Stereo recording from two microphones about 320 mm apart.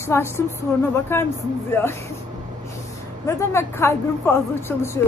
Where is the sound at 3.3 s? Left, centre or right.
Centre.